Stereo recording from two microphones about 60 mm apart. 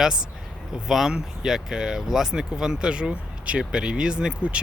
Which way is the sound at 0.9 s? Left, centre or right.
Centre.